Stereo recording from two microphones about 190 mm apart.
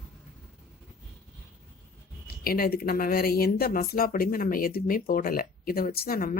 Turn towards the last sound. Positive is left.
turn(degrees=50)  # may be behind; listen again after turning